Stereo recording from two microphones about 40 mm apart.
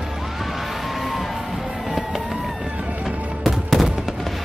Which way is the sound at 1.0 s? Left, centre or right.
Centre.